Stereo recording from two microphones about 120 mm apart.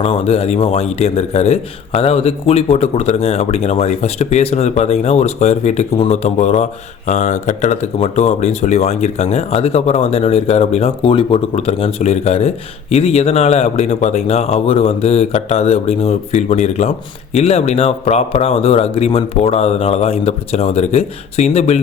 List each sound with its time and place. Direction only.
0.0 s a man's voice: 55° left (ahead or behind)
7.1 s a man's voice: 80° left